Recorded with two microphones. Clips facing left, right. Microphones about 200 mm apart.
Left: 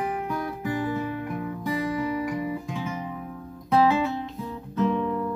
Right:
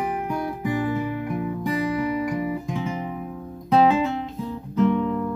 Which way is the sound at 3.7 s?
20° right (ahead or behind).